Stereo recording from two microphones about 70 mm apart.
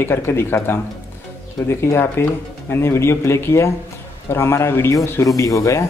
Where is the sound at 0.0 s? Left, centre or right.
Left.